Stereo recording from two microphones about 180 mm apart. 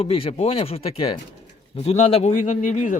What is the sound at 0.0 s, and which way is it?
A man's voice, 30° left (ahead or behind).